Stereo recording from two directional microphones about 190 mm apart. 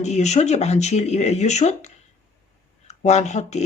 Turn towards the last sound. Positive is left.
turn(degrees=35)  # may be behind; listen again after turning